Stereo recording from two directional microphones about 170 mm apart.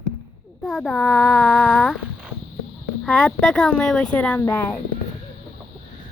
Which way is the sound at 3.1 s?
Centre (ahead or behind).